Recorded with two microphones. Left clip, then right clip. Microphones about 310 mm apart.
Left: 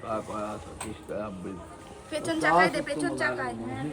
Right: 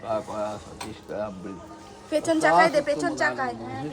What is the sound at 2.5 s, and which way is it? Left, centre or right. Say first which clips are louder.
Speech: right 3 dB; centre.